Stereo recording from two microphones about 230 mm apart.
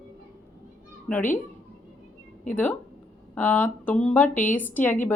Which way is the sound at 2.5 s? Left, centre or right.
Centre.